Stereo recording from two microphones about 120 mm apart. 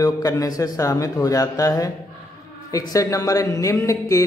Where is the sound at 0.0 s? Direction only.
30° left (ahead or behind).